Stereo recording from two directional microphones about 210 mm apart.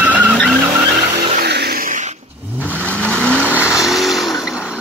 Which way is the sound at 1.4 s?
50° right (ahead or behind).